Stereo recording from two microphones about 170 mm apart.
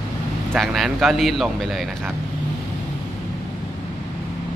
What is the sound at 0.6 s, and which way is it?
A man's voice, centre (ahead or behind).